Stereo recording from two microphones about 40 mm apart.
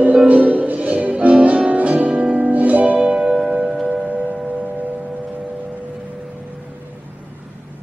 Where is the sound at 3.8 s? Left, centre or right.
Right.